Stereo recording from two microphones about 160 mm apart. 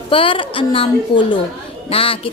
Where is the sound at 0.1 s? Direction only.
35° left (ahead or behind).